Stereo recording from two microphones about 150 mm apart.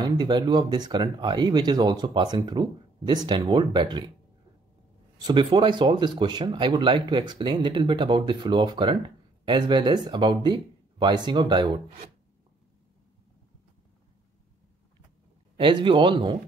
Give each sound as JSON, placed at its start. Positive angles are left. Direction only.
{"t": 0.0, "sound": "speech", "side_deg": -30}
{"t": 5.2, "sound": "speech", "side_deg": -30}
{"t": 15.5, "sound": "speech", "side_deg": -35}